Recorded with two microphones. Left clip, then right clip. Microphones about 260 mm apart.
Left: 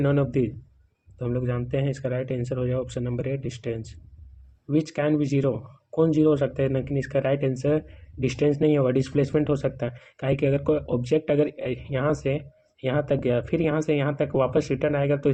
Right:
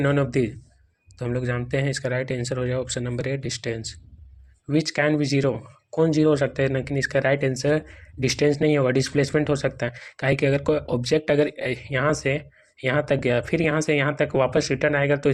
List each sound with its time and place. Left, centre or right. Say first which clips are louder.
0.0 s speech: right 2 dB; right